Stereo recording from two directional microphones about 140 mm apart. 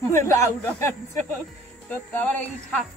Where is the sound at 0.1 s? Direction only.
20° left (ahead or behind).